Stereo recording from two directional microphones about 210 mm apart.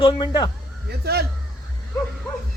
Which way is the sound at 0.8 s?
50° right (ahead or behind).